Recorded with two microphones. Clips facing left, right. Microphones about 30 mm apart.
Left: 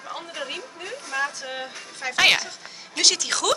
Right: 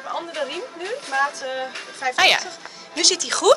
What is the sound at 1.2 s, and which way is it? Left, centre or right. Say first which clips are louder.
A woman's voice: right 5 dB; centre.